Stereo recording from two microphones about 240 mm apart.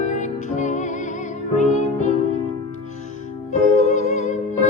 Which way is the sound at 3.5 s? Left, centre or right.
Left.